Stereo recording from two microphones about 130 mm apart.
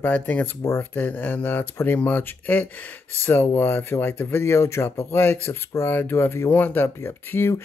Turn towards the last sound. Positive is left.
turn(degrees=15)  # may be behind; listen again after turning